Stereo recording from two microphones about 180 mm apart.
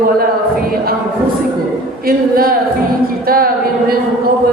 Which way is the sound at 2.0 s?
55° right (ahead or behind).